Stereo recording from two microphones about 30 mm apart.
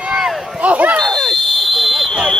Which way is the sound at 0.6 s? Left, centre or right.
Right.